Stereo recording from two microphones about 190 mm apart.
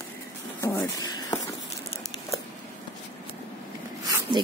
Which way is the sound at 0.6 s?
15° left (ahead or behind).